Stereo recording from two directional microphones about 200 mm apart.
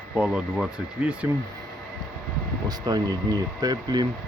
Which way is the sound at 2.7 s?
20° right (ahead or behind).